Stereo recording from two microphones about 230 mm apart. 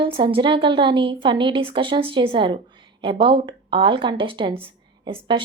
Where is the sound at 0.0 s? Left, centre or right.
Right.